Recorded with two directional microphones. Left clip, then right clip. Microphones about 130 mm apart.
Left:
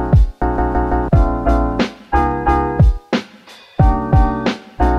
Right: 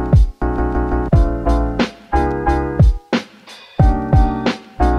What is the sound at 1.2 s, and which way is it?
Music, 15° left (ahead or behind).